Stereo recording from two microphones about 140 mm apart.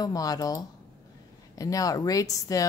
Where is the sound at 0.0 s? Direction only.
25° left (ahead or behind).